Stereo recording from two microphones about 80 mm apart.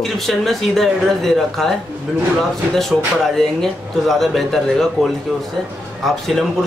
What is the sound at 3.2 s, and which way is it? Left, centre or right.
Speech, centre.